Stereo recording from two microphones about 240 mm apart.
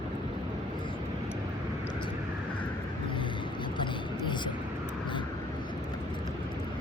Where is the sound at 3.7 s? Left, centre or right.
Centre.